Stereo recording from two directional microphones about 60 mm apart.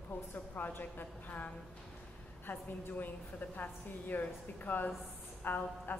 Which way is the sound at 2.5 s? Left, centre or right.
Left.